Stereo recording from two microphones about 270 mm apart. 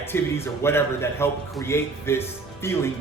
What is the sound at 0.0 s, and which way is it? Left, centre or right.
A man's voice, centre.